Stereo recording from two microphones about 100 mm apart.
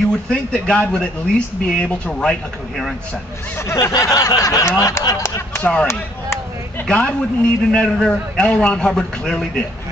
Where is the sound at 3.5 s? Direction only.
25° left (ahead or behind).